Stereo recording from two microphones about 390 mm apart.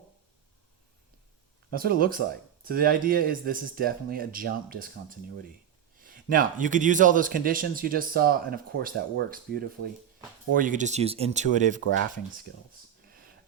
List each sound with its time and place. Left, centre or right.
1.7 s a man's voice: right